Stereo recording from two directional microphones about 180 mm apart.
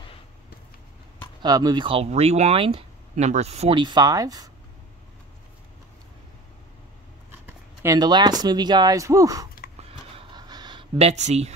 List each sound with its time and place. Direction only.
1.4 s speech: 20° right (ahead or behind)
7.4 s speech: 15° right (ahead or behind)
10.1 s a sound: 25° right (ahead or behind); by 11.5 s 40° right (ahead or behind)